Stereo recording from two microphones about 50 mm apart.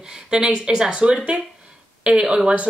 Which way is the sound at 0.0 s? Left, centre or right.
Centre.